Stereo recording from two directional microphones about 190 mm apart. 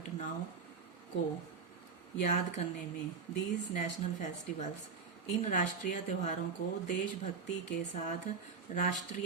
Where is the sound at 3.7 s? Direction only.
40° left (ahead or behind).